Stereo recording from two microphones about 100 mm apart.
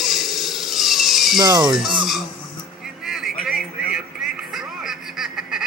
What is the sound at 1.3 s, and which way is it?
Speech, 45° right (ahead or behind).